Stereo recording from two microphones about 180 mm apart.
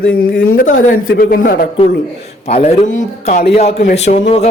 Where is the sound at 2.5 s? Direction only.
35° left (ahead or behind).